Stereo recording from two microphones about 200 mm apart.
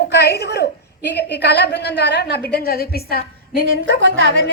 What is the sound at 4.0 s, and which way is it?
Speech, 75° right (ahead or behind).